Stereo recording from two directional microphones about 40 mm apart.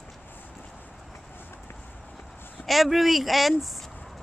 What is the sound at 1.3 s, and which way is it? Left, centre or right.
Run, left.